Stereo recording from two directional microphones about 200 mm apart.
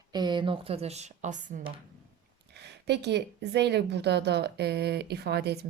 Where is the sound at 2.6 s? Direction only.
55° right (ahead or behind).